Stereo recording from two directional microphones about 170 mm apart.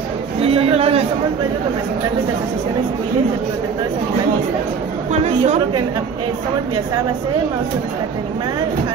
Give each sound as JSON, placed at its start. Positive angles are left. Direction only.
{"t": 0.4, "sound": "a man's voice", "side_deg": -35}
{"t": 5.1, "sound": "a woman's voice", "side_deg": -40}